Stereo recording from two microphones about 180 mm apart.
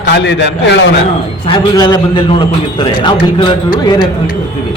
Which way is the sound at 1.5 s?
20° left (ahead or behind).